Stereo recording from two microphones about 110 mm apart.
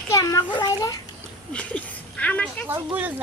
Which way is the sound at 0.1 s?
35° left (ahead or behind).